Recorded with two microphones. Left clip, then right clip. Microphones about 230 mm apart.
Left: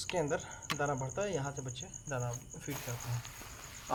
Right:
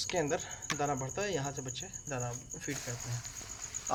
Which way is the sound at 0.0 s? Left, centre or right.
Centre.